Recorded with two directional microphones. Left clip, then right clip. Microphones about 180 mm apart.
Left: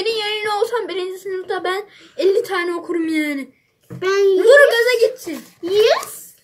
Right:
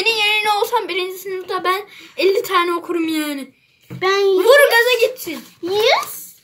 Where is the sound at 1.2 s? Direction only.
90° right.